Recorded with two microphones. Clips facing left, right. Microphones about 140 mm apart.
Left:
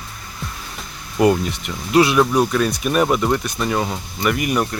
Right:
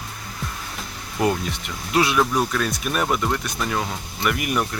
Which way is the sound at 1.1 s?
5° left (ahead or behind).